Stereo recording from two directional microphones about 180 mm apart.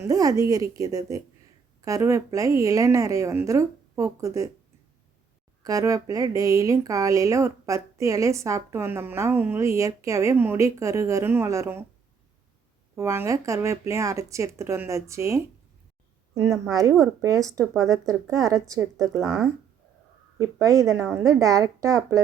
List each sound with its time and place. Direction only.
0.1 s a woman's voice: 20° right (ahead or behind)
5.6 s speech: 20° right (ahead or behind)
13.0 s a woman's voice: 15° right (ahead or behind)
20.4 s speech: 20° right (ahead or behind)